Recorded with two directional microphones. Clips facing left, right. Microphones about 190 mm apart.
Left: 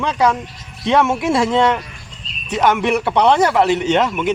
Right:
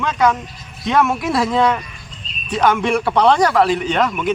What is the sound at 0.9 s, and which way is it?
Speech, 25° left (ahead or behind).